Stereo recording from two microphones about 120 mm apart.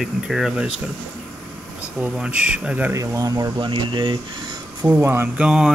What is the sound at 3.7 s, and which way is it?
Speech, 45° right (ahead or behind).